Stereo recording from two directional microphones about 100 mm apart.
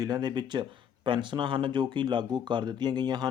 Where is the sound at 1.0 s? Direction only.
55° right (ahead or behind).